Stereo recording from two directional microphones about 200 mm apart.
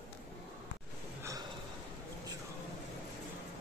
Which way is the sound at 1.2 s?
15° right (ahead or behind).